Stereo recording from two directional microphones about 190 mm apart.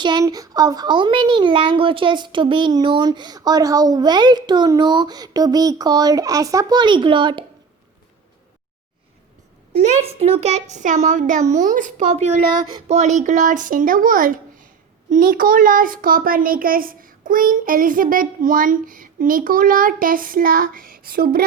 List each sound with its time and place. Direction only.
0.0 s speech: 20° right (ahead or behind)
9.7 s a woman's voice: 35° right (ahead or behind); by 21.4 s 50° right (ahead or behind)